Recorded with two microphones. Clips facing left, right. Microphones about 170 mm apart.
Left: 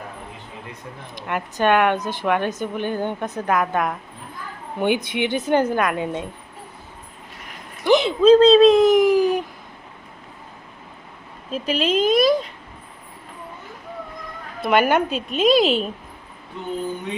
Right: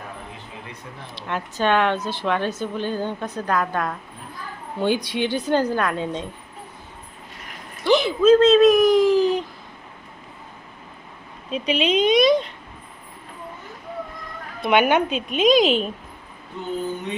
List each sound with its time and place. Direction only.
1.1 s speech: 15° left (ahead or behind)
7.9 s a sound: 20° left (ahead or behind)
8.2 s speech: 30° left (ahead or behind); by 9.4 s 15° left (ahead or behind)
11.5 s a woman's voice: centre (ahead or behind)
14.6 s a woman's voice: 5° left (ahead or behind)